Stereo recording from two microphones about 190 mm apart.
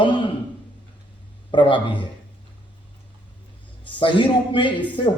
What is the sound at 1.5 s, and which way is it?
Speech, 25° left (ahead or behind).